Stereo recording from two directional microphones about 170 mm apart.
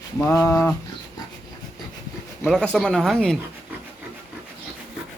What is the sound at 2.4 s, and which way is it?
Speech, 5° left (ahead or behind).